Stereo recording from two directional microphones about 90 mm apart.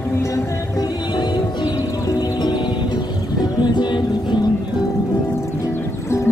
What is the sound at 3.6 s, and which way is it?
Music, 55° left (ahead or behind).